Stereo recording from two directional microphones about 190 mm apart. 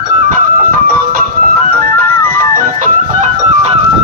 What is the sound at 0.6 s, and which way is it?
Music, 50° right (ahead or behind).